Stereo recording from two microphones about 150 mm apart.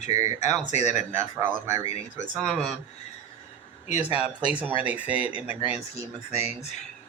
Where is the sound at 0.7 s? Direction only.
50° left (ahead or behind).